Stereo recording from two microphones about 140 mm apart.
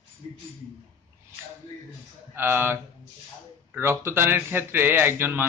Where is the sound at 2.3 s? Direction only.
15° right (ahead or behind).